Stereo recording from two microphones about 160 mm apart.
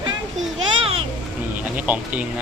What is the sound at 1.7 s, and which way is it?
Speech, 10° right (ahead or behind).